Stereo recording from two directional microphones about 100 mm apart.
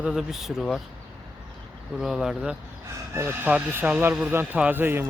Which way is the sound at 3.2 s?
25° right (ahead or behind).